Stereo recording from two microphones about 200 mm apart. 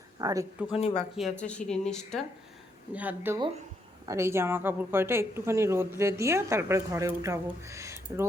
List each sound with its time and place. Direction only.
0.2 s speech: 20° right (ahead or behind)
0.8 s speech: 30° left (ahead or behind)
1.1 s speech: 5° left (ahead or behind)
2.9 s speech: 10° right (ahead or behind)